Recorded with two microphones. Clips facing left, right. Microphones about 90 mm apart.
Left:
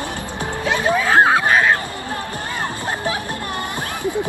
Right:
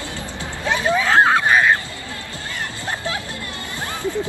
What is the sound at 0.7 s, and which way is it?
Music, 10° left (ahead or behind).